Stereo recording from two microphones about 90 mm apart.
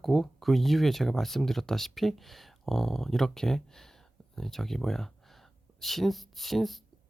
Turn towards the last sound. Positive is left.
turn(degrees=0)  # may be behind; listen again after turning